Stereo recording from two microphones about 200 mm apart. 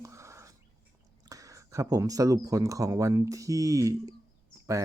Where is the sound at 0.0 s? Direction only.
15° right (ahead or behind).